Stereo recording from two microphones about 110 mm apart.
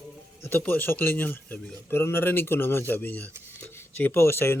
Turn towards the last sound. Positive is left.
turn(degrees=20)  # may be behind; listen again after turning